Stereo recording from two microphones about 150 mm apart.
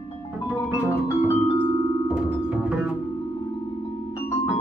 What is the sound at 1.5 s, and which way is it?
Music, 30° left (ahead or behind).